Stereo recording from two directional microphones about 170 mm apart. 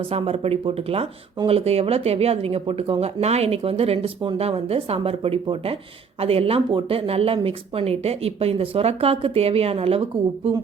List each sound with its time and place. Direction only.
0.1 s speech: 35° right (ahead or behind)